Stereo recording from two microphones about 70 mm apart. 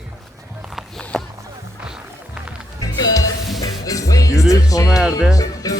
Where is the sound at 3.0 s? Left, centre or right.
Left.